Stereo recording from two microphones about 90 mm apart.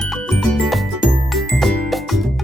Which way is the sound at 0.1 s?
Centre (ahead or behind).